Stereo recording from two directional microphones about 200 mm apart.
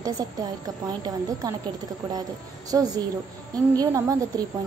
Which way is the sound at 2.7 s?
20° right (ahead or behind).